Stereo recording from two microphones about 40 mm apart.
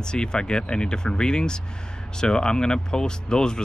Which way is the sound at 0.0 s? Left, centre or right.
Centre.